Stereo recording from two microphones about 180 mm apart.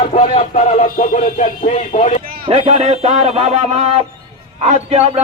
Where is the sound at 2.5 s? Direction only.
40° right (ahead or behind).